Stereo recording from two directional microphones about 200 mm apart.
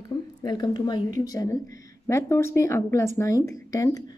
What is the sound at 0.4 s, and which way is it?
Speech, 20° left (ahead or behind).